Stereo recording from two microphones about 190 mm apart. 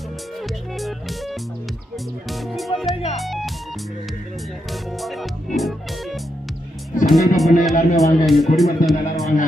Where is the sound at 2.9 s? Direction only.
30° left (ahead or behind).